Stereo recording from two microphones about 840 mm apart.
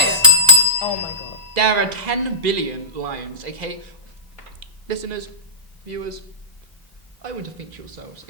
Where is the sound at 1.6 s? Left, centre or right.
Right.